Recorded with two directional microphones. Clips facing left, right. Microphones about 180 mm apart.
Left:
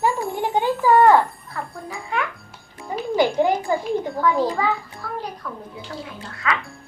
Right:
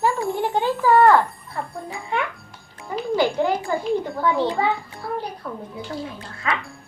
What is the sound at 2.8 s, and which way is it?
A child's voice, 15° left (ahead or behind).